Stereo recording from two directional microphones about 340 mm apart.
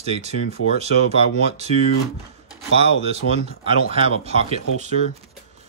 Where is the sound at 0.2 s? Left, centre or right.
Centre.